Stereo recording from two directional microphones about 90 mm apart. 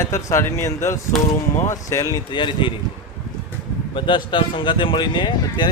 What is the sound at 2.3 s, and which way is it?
Speech, 65° left (ahead or behind).